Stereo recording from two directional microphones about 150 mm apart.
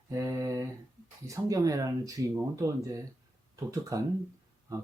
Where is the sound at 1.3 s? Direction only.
25° right (ahead or behind).